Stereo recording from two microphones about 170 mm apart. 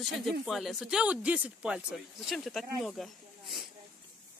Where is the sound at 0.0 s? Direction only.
Centre (ahead or behind).